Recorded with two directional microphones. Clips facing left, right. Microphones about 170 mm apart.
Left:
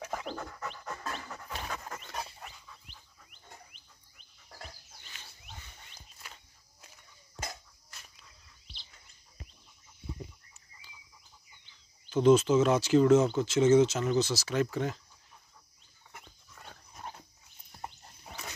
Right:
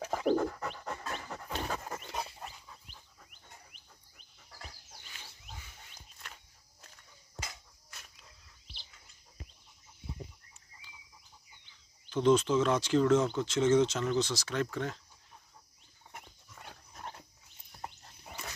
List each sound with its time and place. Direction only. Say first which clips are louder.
0.0 s dog: right 9 dB; 30° right (ahead or behind)
1.9 s dog: right 1 dB; 15° right (ahead or behind)
2.4 s dog: right 2 dB; 45° right (ahead or behind)
6.2 s walk: even; 5° left (ahead or behind)
12.1 s speech: left 3 dB; 5° left (ahead or behind)